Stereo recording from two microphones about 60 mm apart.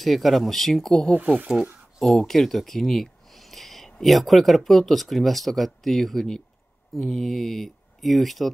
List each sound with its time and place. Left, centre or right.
0.0 s speech: centre
1.1 s speech: right
2.0 s speech: centre